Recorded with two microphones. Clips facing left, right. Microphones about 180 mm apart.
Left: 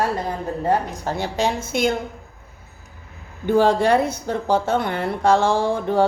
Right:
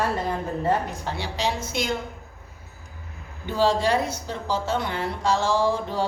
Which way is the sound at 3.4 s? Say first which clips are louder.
Left 5 dB; 55° left (ahead or behind).